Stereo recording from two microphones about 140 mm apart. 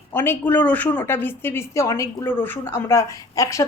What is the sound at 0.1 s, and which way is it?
A woman's voice, 15° left (ahead or behind).